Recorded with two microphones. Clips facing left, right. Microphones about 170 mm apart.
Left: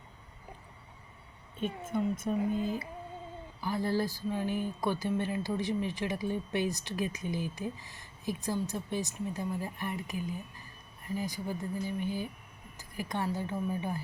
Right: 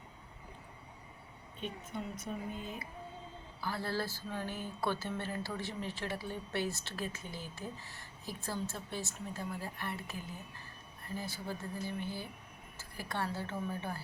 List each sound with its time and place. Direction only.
1.6 s a woman's voice: 50° left (ahead or behind)
3.6 s speech: 15° left (ahead or behind)